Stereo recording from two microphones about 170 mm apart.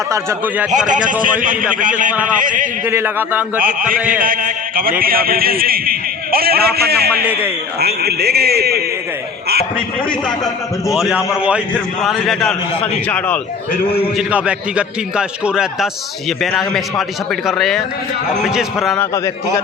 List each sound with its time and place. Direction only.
0.1 s a man's voice: 15° right (ahead or behind)
1.2 s a man's voice: 55° right (ahead or behind)
2.8 s a man's voice: 15° right (ahead or behind)
3.6 s a man's voice: 55° right (ahead or behind)
10.2 s a man's voice: 20° left (ahead or behind)
10.9 s a man's voice: centre (ahead or behind)
14.2 s a man's voice: 5° right (ahead or behind)
18.9 s a man's voice: 15° left (ahead or behind)